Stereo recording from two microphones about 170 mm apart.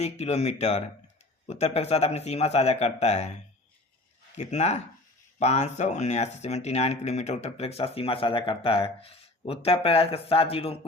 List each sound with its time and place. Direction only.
0.0 s speech: 40° left (ahead or behind)